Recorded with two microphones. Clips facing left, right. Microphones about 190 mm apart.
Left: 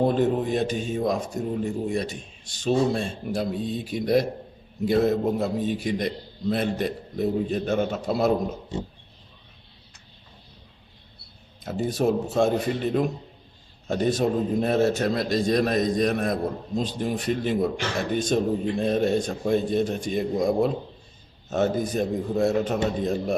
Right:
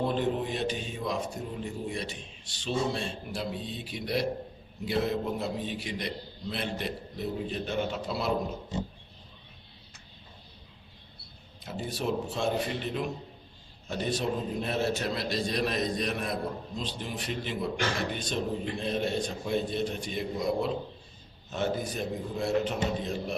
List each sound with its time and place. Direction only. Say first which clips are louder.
0.0 s a man's voice: left 7 dB; 45° left (ahead or behind)
11.6 s a man's voice: left 9 dB; 45° left (ahead or behind)